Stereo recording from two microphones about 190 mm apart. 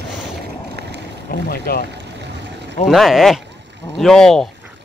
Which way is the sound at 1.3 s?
50° left (ahead or behind).